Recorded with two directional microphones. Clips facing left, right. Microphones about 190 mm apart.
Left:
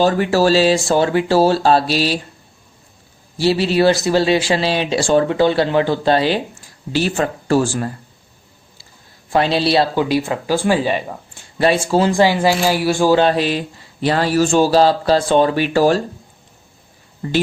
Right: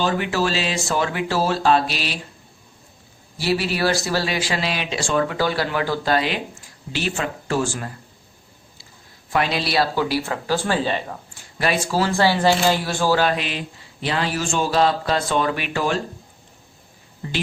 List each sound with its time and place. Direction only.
0.0 s a man's voice: 40° left (ahead or behind)
3.3 s a man's voice: 25° left (ahead or behind)
9.3 s speech: 30° left (ahead or behind); by 11.0 s 10° left (ahead or behind)
11.6 s speech: 30° left (ahead or behind); by 13.1 s 10° left (ahead or behind)
13.1 s a man's voice: 30° left (ahead or behind)
17.2 s speech: 45° left (ahead or behind)